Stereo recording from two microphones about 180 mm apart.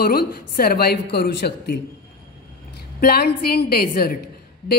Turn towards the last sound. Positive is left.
turn(degrees=60)  # may be behind; listen again after turning